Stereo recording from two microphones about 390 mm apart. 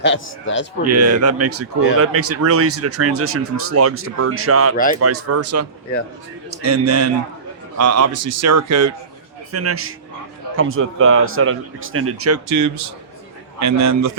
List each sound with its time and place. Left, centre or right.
0.0 s speech: left
0.9 s a man's voice: right